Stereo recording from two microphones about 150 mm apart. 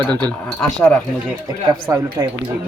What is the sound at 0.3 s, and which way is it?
Speech, 10° left (ahead or behind).